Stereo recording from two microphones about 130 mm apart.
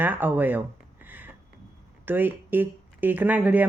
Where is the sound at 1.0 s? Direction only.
15° right (ahead or behind).